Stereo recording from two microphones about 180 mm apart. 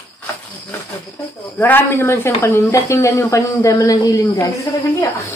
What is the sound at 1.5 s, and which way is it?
Speech, 10° left (ahead or behind).